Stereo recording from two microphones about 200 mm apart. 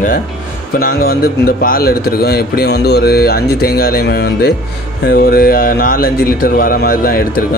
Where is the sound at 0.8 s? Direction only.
50° left (ahead or behind).